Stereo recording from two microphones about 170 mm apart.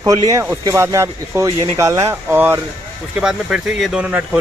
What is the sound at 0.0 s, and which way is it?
Speech, 20° right (ahead or behind).